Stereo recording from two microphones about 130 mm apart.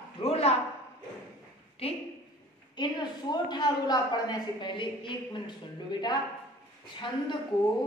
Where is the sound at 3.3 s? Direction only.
30° left (ahead or behind).